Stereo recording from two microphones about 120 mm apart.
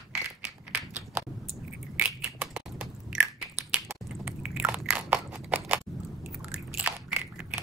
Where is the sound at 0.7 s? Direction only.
15° right (ahead or behind).